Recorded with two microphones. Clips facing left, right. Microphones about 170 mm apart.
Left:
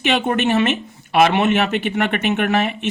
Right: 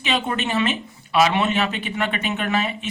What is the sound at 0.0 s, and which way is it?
Speech, 50° left (ahead or behind).